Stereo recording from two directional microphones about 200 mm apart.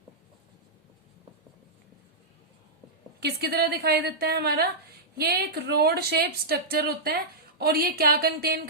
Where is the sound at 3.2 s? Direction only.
55° right (ahead or behind).